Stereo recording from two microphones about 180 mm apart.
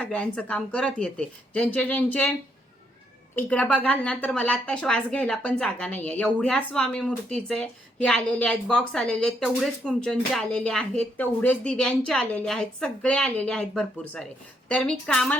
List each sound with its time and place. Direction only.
0.0 s speech: 5° left (ahead or behind)
3.3 s a woman's voice: 10° left (ahead or behind)